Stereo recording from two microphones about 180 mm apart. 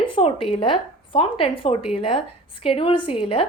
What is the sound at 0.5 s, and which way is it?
A woman's voice, 30° left (ahead or behind).